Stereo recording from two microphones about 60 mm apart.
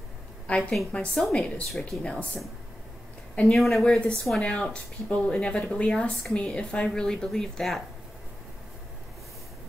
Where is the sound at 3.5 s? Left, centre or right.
Centre.